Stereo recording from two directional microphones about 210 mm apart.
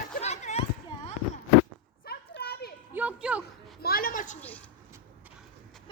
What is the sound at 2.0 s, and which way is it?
Children playing, 50° left (ahead or behind).